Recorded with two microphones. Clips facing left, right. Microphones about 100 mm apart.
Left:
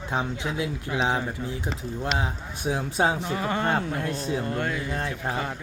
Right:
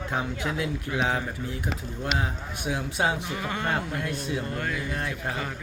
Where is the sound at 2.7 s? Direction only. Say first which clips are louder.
Left 3 dB; 35° left (ahead or behind).